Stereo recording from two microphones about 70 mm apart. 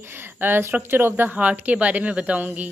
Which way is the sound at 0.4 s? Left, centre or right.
Right.